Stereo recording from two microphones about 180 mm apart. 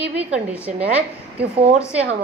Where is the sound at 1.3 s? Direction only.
35° right (ahead or behind).